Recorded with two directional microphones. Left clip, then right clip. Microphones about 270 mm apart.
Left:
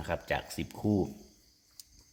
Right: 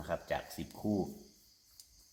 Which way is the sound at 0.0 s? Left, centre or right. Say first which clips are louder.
Left 4 dB; left.